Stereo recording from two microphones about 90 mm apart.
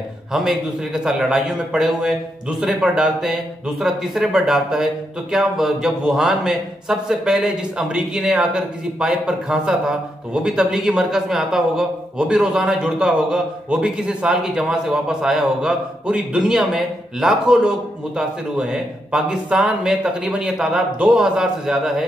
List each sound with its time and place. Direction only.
0.3 s a man's voice: 5° right (ahead or behind)